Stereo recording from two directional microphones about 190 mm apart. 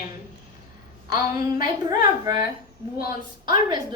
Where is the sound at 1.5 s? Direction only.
20° right (ahead or behind).